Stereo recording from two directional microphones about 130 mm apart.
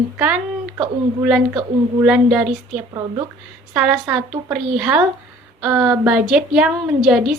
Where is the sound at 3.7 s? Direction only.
10° right (ahead or behind).